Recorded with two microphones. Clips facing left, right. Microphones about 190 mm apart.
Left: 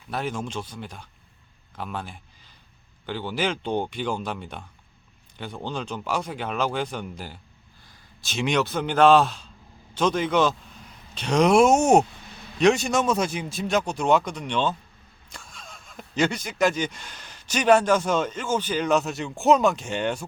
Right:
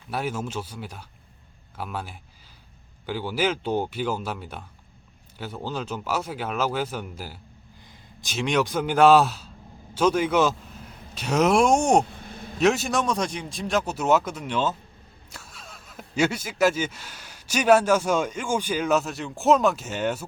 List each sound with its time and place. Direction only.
0.1 s speech: 10° right (ahead or behind)
8.4 s speech: centre (ahead or behind)
12.0 s a sound: 50° right (ahead or behind)
12.5 s speech: 5° right (ahead or behind)